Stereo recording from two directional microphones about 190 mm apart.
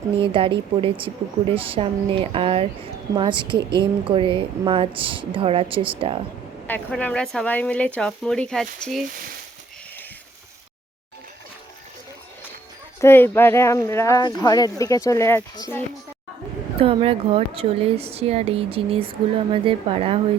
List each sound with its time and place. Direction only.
0.2 s speech: 25° right (ahead or behind)
6.7 s speech: 10° left (ahead or behind)
13.0 s speech: 10° left (ahead or behind)
16.8 s a woman's voice: 30° right (ahead or behind)